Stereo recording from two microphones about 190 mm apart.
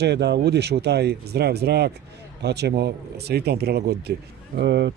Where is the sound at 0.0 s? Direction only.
60° right (ahead or behind).